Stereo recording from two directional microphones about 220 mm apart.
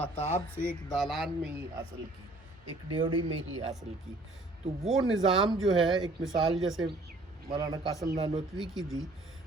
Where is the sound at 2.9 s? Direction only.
20° right (ahead or behind).